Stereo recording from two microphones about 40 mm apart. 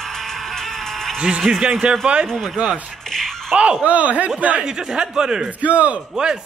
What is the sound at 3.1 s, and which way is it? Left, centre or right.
Music, centre.